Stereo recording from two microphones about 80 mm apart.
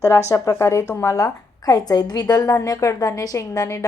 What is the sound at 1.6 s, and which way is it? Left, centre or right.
A woman's voice, left.